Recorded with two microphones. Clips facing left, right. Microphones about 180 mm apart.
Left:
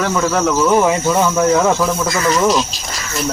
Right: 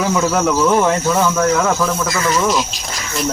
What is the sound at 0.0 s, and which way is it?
Speech, 5° right (ahead or behind).